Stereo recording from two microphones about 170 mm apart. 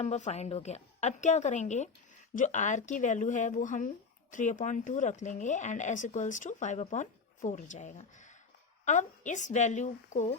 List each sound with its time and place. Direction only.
0.0 s speech: 40° left (ahead or behind)